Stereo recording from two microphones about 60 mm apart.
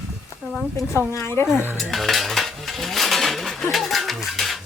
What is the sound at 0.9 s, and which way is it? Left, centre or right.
Speech, left.